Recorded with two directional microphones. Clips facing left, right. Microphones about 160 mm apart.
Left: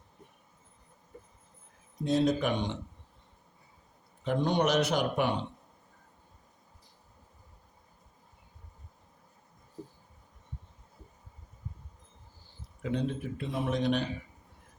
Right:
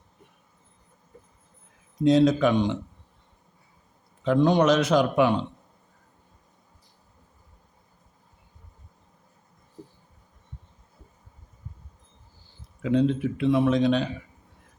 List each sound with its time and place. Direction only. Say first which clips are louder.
2.0 s a man's voice: right 8 dB; 90° right
4.2 s a man's voice: right 8 dB; 90° right
12.8 s a man's voice: right 10 dB; 90° right